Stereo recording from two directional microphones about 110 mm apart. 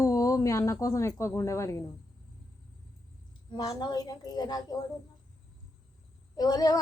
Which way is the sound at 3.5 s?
35° left (ahead or behind).